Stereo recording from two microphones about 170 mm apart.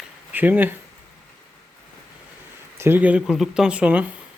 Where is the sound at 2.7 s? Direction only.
10° right (ahead or behind).